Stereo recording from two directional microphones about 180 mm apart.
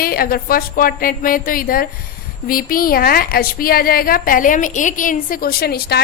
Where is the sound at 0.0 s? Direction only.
55° left (ahead or behind).